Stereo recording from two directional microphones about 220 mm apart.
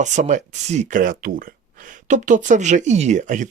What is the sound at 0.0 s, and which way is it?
Speech, 35° right (ahead or behind).